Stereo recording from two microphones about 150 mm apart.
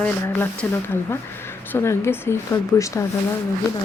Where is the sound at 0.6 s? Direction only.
5° left (ahead or behind).